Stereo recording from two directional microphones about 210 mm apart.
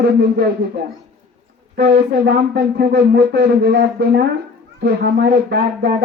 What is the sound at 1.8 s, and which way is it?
Speech, 50° right (ahead or behind).